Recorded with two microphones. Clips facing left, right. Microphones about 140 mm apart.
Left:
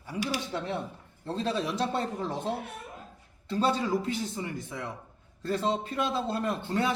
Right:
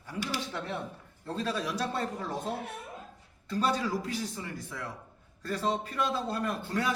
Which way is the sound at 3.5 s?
25° left (ahead or behind).